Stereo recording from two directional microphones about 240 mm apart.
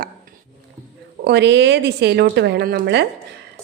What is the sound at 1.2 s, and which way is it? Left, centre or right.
A woman's voice, right.